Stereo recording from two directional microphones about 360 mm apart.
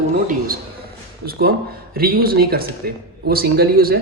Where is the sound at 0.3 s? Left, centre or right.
Right.